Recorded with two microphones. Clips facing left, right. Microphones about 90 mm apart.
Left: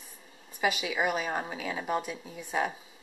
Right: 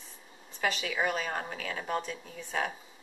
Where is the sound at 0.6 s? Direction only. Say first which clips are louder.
Left 2 dB; 10° left (ahead or behind).